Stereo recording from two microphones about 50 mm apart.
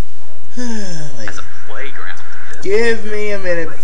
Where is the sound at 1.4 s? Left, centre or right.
Centre.